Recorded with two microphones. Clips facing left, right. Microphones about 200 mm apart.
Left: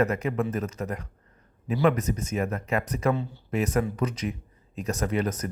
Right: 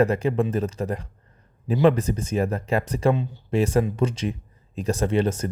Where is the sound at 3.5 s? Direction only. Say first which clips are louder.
Right 5 dB; 30° right (ahead or behind).